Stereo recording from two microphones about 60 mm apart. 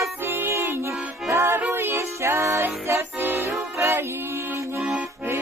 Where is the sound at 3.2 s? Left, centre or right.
Right.